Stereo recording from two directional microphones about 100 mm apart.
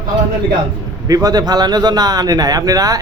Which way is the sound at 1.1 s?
40° right (ahead or behind).